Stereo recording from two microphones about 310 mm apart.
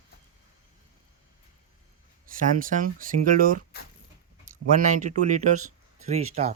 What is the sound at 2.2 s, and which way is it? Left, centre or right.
Speech, right.